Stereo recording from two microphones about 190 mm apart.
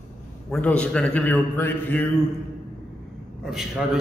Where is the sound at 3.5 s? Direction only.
Centre (ahead or behind).